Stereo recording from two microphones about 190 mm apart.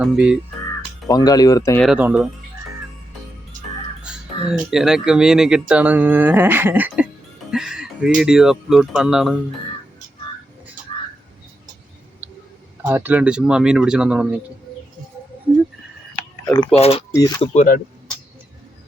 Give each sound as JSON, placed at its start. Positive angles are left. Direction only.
{"t": 0.0, "sound": "speech", "side_deg": -5}
{"t": 1.0, "sound": "speech", "side_deg": 20}
{"t": 1.8, "sound": "speech", "side_deg": -5}
{"t": 4.0, "sound": "crow", "side_deg": -5}
{"t": 4.7, "sound": "speech", "side_deg": 0}
{"t": 12.2, "sound": "a sound", "side_deg": -10}
{"t": 12.8, "sound": "speech", "side_deg": -10}
{"t": 16.7, "sound": "speech", "side_deg": 30}
{"t": 17.1, "sound": "speech", "side_deg": 20}
{"t": 17.4, "sound": "speech", "side_deg": 40}